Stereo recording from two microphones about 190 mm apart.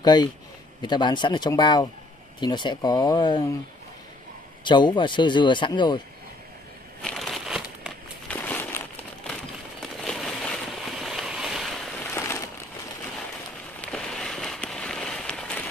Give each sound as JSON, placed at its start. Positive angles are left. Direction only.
{"t": 0.0, "sound": "a man's voice", "side_deg": 20}
{"t": 4.6, "sound": "speech", "side_deg": 25}
{"t": 7.0, "sound": "crumpling", "side_deg": 0}
{"t": 8.3, "sound": "a sound", "side_deg": 10}
{"t": 12.0, "sound": "a sound", "side_deg": 15}
{"t": 13.7, "sound": "fireworks", "side_deg": 5}